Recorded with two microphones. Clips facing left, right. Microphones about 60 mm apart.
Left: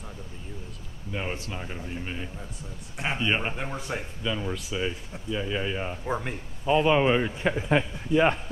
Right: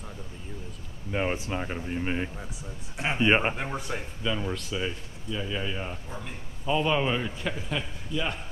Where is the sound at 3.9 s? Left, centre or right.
Centre.